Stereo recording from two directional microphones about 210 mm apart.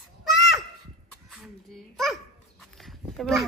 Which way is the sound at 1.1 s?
Centre (ahead or behind).